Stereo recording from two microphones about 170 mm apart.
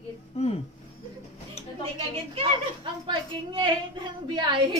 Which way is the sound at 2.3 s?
30° right (ahead or behind).